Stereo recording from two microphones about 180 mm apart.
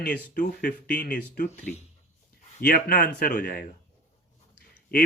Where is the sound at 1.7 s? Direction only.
5° left (ahead or behind).